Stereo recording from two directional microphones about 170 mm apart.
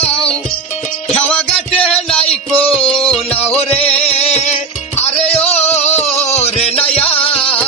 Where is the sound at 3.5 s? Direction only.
35° left (ahead or behind).